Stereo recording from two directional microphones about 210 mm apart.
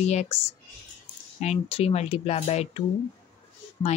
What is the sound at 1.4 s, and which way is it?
Speech, 30° left (ahead or behind).